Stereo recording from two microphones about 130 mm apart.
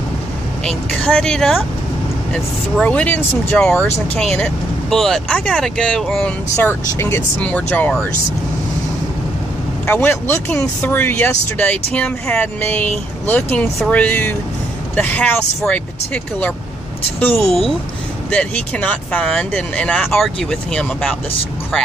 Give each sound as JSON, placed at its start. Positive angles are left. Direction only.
{"t": 0.7, "sound": "speech", "side_deg": 5}
{"t": 6.9, "sound": "speech", "side_deg": 20}
{"t": 9.8, "sound": "speech", "side_deg": 15}